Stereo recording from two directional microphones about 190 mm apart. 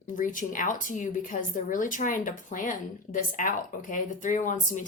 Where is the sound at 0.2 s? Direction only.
45° left (ahead or behind).